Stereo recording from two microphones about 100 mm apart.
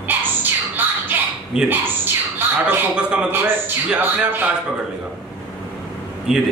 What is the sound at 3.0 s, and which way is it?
Speech, 10° right (ahead or behind).